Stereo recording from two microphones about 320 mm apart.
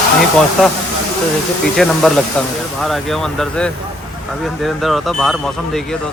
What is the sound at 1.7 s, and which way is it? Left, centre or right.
Speech, centre.